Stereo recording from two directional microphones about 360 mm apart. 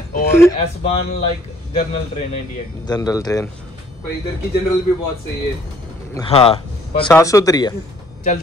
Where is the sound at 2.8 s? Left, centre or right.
Centre.